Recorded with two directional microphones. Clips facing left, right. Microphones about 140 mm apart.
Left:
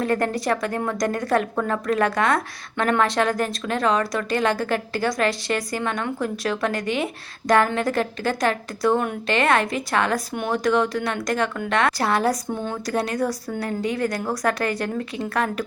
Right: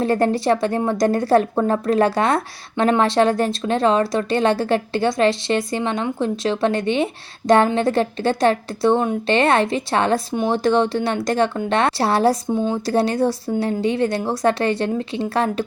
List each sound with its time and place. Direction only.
0.0 s speech: 30° right (ahead or behind)